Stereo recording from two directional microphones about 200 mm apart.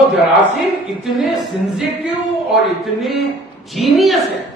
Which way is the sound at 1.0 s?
Centre (ahead or behind).